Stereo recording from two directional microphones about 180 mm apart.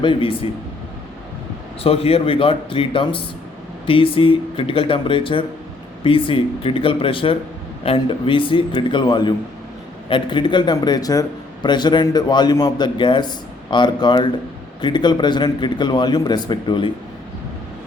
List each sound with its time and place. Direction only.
0.0 s a man's voice: 30° left (ahead or behind)
1.8 s a man's voice: 35° left (ahead or behind)